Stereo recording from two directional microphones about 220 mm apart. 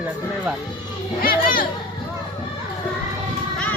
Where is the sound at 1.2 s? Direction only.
40° left (ahead or behind).